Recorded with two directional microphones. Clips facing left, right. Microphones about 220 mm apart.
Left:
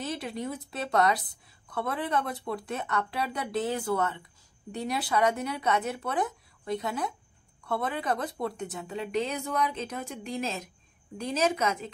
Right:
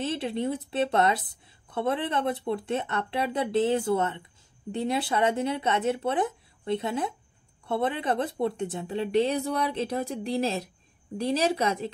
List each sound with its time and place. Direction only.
0.0 s speech: 25° right (ahead or behind)